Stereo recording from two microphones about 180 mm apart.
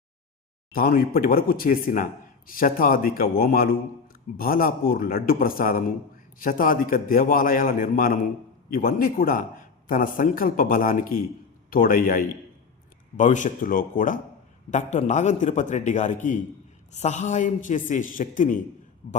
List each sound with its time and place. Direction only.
0.7 s a man's voice: 55° left (ahead or behind)